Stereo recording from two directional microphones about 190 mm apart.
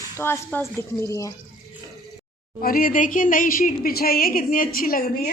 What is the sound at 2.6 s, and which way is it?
A woman's voice, 50° left (ahead or behind).